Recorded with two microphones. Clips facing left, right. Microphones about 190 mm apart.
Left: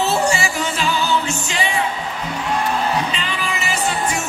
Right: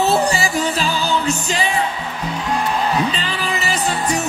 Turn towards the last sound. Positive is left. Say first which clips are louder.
# right 2 dB
turn(degrees=-35)  # may be behind; listen again after turning